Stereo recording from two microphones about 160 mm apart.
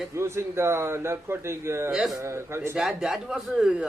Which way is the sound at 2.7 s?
5° right (ahead or behind).